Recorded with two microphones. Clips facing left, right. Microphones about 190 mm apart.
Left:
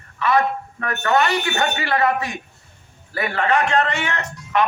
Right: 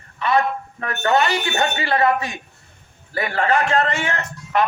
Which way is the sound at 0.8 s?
30° right (ahead or behind).